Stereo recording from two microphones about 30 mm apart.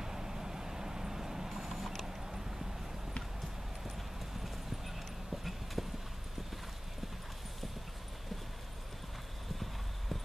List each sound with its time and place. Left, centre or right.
0.0 s vehicle: centre
1.5 s mechanisms: centre
4.8 s clip-clop: centre